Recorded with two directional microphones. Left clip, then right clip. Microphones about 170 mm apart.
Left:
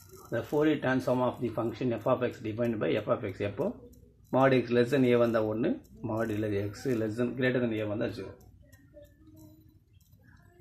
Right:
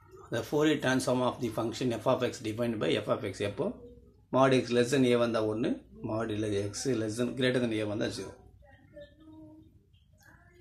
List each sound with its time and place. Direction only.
0.3 s speech: centre (ahead or behind)